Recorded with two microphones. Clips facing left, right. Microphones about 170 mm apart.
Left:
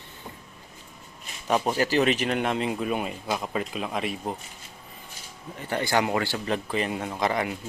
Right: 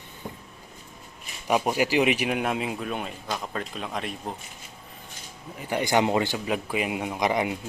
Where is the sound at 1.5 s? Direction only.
10° right (ahead or behind).